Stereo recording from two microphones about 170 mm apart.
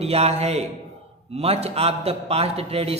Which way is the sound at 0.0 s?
35° right (ahead or behind).